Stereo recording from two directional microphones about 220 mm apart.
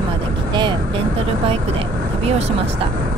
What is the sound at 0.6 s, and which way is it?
Speech, 20° right (ahead or behind).